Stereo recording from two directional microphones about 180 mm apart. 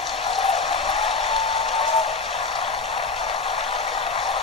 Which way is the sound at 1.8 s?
35° left (ahead or behind).